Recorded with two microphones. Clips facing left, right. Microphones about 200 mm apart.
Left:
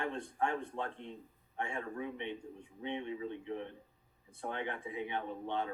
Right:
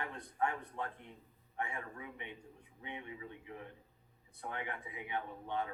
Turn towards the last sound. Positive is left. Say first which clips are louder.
# left 2 dB
turn(degrees=25)  # may be behind; listen again after turning